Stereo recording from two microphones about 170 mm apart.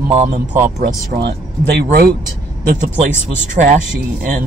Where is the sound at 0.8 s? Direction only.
70° right (ahead or behind).